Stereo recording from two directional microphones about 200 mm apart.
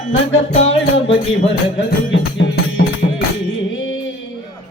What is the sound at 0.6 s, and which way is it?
Music, 30° left (ahead or behind).